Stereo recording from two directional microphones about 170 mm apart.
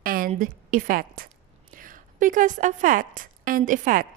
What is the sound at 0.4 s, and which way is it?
A woman's voice, 50° right (ahead or behind).